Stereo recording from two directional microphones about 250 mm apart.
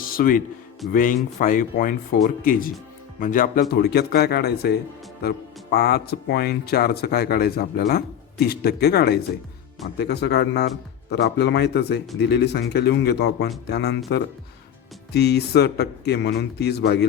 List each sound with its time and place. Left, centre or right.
0.1 s a man's voice: left
15.1 s speech: left